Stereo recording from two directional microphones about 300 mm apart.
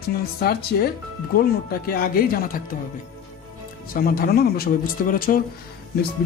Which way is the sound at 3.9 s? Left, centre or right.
Left.